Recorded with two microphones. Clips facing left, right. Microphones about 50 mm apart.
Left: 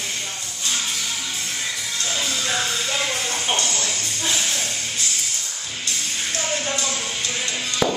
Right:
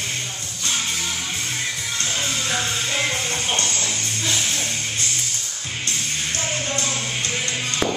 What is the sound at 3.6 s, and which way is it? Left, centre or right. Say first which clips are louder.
Speech: even; right.